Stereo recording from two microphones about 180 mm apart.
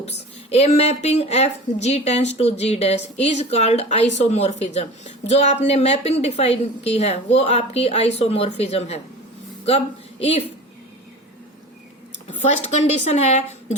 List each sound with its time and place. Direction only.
0.5 s a woman's voice: 35° left (ahead or behind)
12.5 s a woman's voice: 40° left (ahead or behind)